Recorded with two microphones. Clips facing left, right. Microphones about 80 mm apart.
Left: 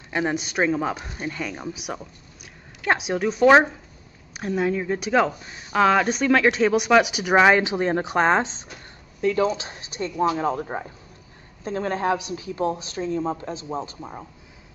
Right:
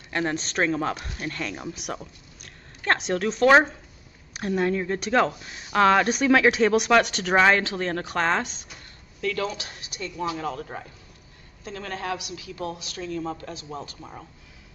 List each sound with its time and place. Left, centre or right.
0.1 s speech: centre
1.5 s a woman's voice: centre; by 14.2 s left